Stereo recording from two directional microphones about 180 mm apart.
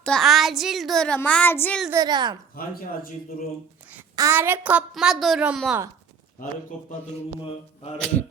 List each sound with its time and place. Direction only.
0.0 s a child's voice: centre (ahead or behind)
1.9 s a woman's voice: 20° right (ahead or behind)
4.1 s a woman's voice: 15° right (ahead or behind); by 6.9 s 5° left (ahead or behind)
7.9 s a child's voice: 5° left (ahead or behind)